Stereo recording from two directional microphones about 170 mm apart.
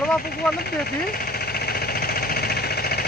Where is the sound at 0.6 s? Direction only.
60° left (ahead or behind).